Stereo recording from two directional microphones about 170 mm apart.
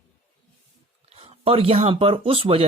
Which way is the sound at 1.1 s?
35° right (ahead or behind).